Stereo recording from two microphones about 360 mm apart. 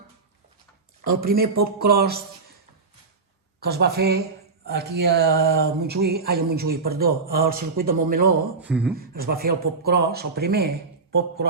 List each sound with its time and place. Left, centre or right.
1.1 s speech: right
3.6 s speech: right
8.6 s speech: centre
9.0 s speech: right